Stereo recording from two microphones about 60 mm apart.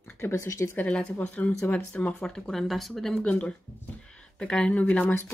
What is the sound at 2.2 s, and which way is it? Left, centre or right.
Speech, centre.